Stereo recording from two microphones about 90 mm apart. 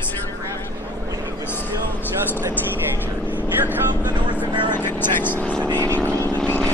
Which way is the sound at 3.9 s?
50° right (ahead or behind).